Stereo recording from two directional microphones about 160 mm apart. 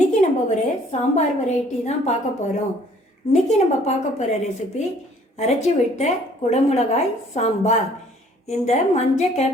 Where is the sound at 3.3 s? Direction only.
45° left (ahead or behind).